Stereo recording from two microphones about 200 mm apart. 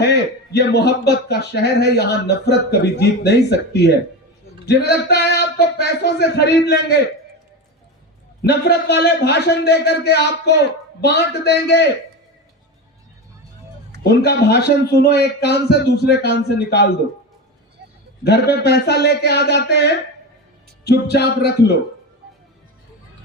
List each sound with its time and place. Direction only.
0.0 s a man's voice: 55° left (ahead or behind)
8.4 s a man's voice: 55° left (ahead or behind)
14.0 s a man's voice: 55° left (ahead or behind)
18.2 s a man's voice: 55° left (ahead or behind)